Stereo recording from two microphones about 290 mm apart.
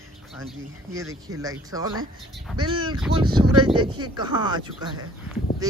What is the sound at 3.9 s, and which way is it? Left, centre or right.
Speech, centre.